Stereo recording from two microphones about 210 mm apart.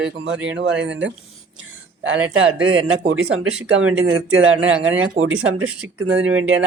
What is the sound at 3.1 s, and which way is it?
Speech, 90° right.